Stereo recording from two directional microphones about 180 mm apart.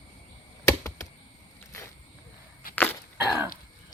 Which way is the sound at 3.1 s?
10° right (ahead or behind).